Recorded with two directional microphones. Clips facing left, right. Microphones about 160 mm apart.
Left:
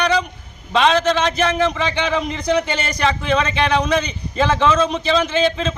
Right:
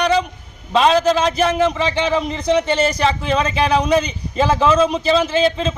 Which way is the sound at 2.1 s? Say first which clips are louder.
Right 2 dB; centre (ahead or behind).